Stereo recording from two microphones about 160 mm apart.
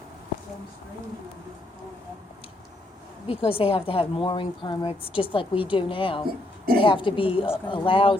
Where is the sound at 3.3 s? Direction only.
35° left (ahead or behind).